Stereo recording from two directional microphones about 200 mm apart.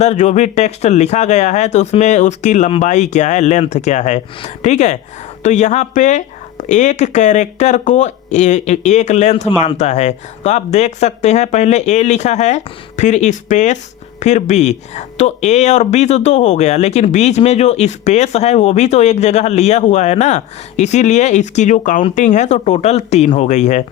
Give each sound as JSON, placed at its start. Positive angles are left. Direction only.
{"t": 0.0, "sound": "speech", "side_deg": 35}